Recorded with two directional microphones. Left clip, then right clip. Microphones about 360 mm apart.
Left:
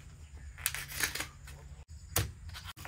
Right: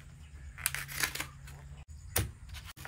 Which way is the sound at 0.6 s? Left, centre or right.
Centre.